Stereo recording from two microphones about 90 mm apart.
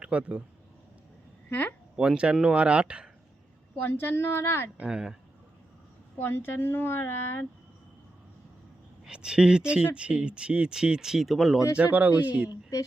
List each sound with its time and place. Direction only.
0.0 s speech: 15° right (ahead or behind)
1.5 s speech: 20° left (ahead or behind)
2.0 s speech: 10° right (ahead or behind)
3.8 s speech: 25° left (ahead or behind)
4.8 s speech: 10° right (ahead or behind)
6.1 s speech: 25° left (ahead or behind)
9.0 s speech: 10° right (ahead or behind)
11.8 s speech: 20° right (ahead or behind)